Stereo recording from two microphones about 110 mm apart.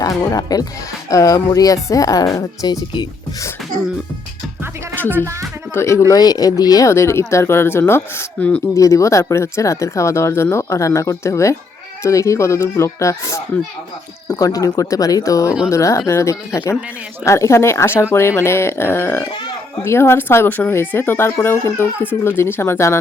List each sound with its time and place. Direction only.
0.0 s speech: 35° left (ahead or behind)
5.0 s speech: 20° right (ahead or behind)
5.7 s speech: 25° left (ahead or behind)
8.4 s speech: 10° left (ahead or behind)
8.7 s speech: 30° left (ahead or behind)